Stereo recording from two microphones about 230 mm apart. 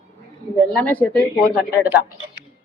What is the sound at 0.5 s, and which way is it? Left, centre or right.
Speech, centre.